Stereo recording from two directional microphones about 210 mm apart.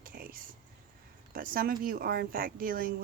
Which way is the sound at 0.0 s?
45° right (ahead or behind).